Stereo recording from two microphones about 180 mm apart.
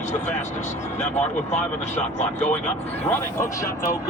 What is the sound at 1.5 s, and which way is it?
Speech, 40° left (ahead or behind).